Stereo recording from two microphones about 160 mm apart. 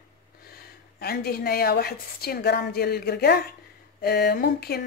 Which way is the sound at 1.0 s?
75° left (ahead or behind).